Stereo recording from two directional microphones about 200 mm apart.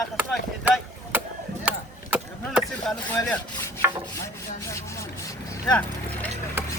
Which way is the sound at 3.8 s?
10° right (ahead or behind).